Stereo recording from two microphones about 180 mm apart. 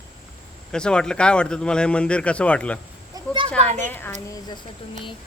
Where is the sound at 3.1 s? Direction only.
20° right (ahead or behind).